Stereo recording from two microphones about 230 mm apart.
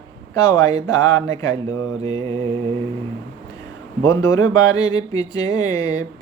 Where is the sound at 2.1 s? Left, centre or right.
Right.